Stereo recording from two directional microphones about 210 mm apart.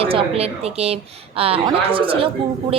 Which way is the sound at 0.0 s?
25° right (ahead or behind).